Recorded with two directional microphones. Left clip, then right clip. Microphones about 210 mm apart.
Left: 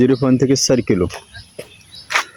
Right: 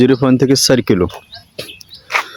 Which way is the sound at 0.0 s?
10° right (ahead or behind).